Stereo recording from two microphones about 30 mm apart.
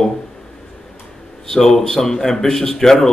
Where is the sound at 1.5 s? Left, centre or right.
Centre.